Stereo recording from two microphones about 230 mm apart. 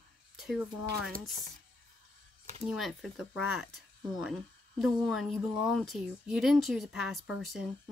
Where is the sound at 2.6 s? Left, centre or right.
Centre.